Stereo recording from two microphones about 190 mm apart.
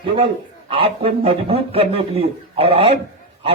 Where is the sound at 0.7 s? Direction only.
30° right (ahead or behind).